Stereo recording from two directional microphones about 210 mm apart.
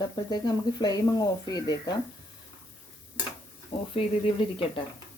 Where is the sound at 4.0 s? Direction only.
25° left (ahead or behind).